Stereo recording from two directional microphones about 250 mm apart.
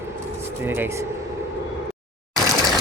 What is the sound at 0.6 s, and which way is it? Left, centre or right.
Speech, centre.